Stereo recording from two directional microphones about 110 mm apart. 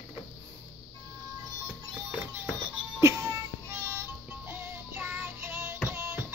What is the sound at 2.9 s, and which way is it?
Music, 25° right (ahead or behind).